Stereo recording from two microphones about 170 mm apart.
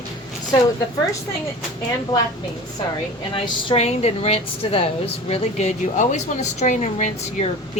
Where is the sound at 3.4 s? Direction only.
35° left (ahead or behind).